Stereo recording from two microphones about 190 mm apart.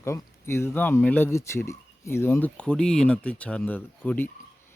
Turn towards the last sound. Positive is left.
turn(degrees=10)  # may be behind; listen again after turning